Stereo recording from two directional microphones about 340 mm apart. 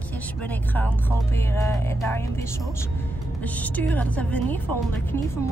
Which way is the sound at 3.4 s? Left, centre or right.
Centre.